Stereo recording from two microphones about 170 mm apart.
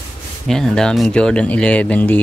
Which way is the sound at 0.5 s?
5° left (ahead or behind).